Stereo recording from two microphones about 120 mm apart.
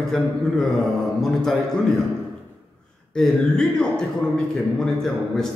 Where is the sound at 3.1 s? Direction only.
5° left (ahead or behind).